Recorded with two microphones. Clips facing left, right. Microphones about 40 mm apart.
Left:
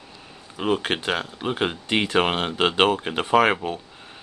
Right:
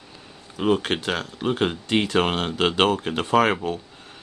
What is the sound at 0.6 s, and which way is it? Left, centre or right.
Speech, centre.